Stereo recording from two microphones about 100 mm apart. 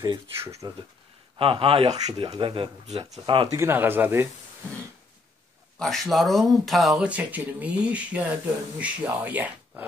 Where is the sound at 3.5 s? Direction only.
20° right (ahead or behind).